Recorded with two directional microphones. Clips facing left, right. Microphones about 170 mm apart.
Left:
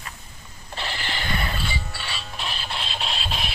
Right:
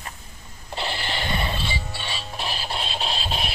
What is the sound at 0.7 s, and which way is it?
Music, 30° right (ahead or behind).